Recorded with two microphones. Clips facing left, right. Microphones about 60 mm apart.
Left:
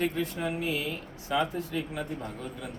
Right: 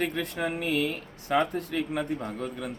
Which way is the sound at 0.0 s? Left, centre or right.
Right.